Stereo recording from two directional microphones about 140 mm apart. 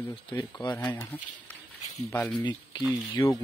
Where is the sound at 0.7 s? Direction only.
15° left (ahead or behind).